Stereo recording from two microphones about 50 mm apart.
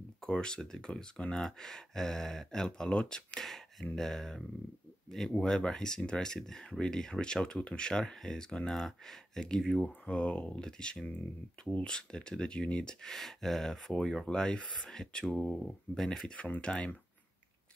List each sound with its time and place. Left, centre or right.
0.2 s speech: centre
16.3 s speech: left